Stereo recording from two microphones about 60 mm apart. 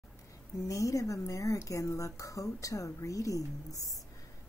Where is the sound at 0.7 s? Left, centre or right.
Left.